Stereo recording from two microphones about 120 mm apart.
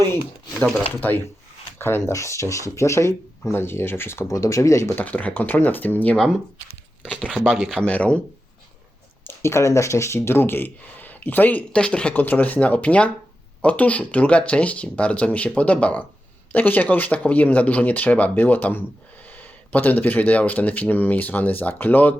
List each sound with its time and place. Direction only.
0.5 s speech: 10° left (ahead or behind)
1.8 s speech: 20° left (ahead or behind)
5.0 s speech: 15° left (ahead or behind)
7.9 s speech: 10° left (ahead or behind)
9.2 s speech: 20° left (ahead or behind)